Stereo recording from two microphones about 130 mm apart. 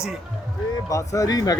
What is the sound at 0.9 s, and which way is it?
Speech, 25° left (ahead or behind).